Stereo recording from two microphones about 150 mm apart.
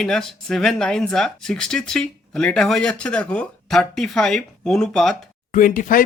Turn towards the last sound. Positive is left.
turn(degrees=70)  # may be behind; listen again after turning